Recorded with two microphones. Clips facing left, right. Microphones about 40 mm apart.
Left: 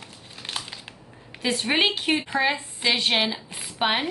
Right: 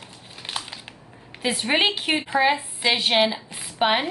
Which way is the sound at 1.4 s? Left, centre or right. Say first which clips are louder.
Right 1 dB; centre.